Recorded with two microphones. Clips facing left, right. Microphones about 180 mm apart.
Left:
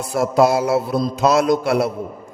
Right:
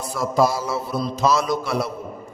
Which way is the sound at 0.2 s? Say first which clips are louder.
Left 5 dB; 65° left (ahead or behind).